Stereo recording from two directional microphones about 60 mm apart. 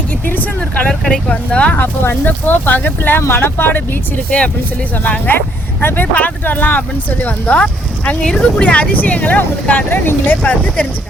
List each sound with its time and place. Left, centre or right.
0.3 s vehicle: left
1.3 s speech: left
1.7 s speech: left
4.4 s speech: left
7.6 s speech: centre